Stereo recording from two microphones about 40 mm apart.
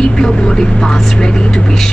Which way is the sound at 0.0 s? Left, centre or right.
Centre.